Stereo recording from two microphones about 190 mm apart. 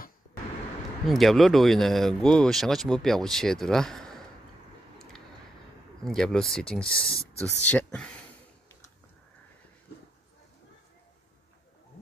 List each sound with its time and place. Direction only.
1.0 s speech: centre (ahead or behind)
6.0 s speech: 5° left (ahead or behind)
9.9 s a sound: 60° left (ahead or behind)